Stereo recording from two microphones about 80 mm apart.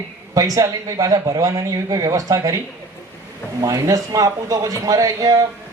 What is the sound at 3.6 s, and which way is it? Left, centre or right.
A man's voice, right.